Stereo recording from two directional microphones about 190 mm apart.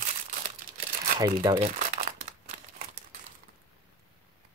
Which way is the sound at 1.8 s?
40° right (ahead or behind).